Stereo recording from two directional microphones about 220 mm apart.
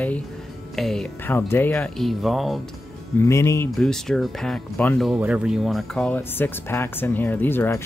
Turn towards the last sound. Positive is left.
turn(degrees=10)  # may be behind; listen again after turning